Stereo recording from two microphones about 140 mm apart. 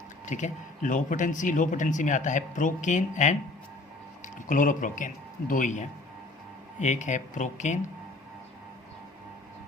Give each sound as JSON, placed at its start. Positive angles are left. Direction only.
{"t": 0.3, "sound": "speech", "side_deg": 60}